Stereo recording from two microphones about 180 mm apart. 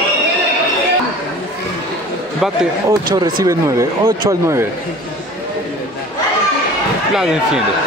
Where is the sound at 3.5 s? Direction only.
15° right (ahead or behind).